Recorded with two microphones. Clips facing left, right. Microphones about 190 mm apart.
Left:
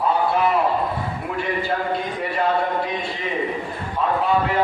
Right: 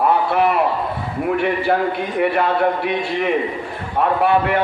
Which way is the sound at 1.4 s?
65° right (ahead or behind).